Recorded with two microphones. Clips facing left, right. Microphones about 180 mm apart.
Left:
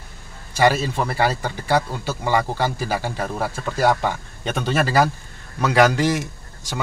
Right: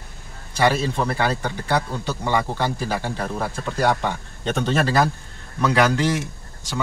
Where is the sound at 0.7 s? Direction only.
10° left (ahead or behind).